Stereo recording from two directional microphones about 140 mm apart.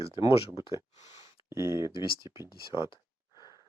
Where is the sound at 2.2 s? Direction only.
35° left (ahead or behind).